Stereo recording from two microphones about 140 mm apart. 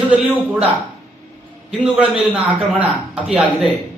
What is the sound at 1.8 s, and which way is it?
A man's voice, 10° right (ahead or behind).